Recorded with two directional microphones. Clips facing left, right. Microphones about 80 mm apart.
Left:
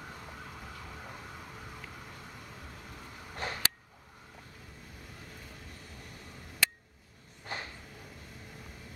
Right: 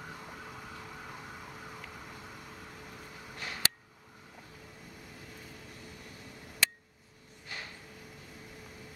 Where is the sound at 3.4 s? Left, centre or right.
Left.